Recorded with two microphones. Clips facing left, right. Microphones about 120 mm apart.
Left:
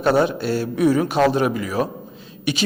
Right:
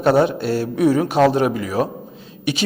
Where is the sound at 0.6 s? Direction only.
45° right (ahead or behind).